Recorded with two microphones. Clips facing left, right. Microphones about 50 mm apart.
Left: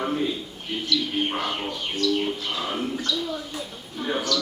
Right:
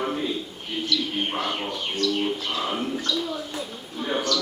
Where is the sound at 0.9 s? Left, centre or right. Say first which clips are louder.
Left 2 dB; centre.